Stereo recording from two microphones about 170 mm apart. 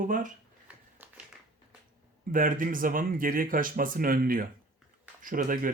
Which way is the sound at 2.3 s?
55° right (ahead or behind).